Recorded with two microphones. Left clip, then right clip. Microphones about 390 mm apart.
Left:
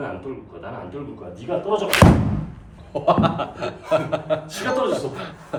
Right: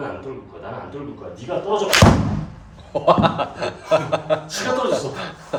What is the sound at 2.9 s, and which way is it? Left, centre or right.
A man's voice, right.